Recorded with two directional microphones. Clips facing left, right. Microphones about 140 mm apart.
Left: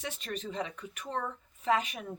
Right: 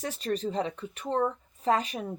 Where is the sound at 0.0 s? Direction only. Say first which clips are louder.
Right 8 dB; 35° right (ahead or behind).